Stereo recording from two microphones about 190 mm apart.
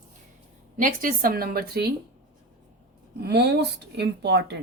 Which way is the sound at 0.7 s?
45° right (ahead or behind).